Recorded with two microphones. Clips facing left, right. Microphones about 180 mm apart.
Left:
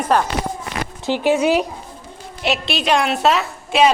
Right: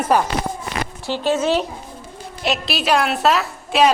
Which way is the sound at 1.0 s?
15° left (ahead or behind).